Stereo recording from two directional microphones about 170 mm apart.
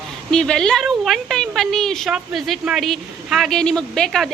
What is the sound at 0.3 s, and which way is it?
A woman's voice, 5° left (ahead or behind).